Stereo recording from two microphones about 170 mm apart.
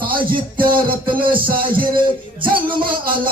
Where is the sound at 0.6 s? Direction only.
30° right (ahead or behind).